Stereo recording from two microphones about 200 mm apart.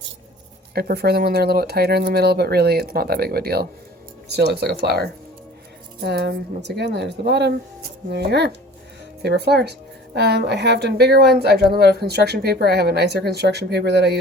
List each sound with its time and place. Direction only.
0.7 s speech: 50° right (ahead or behind)
6.0 s speech: 55° right (ahead or behind)